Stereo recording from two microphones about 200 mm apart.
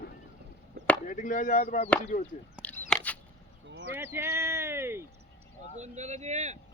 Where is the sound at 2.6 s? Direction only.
10° left (ahead or behind).